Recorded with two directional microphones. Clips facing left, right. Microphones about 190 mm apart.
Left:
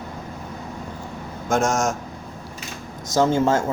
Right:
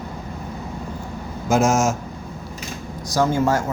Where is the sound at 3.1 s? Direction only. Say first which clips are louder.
Left 1 dB; 25° left (ahead or behind).